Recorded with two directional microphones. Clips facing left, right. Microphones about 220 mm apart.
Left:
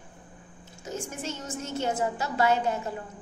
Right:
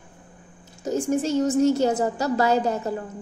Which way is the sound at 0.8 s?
35° right (ahead or behind).